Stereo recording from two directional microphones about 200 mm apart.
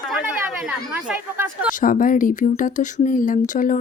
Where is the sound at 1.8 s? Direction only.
40° left (ahead or behind).